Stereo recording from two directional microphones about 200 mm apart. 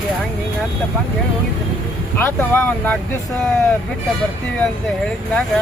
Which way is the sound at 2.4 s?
10° left (ahead or behind).